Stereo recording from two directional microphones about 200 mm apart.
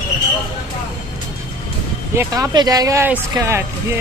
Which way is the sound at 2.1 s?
15° right (ahead or behind).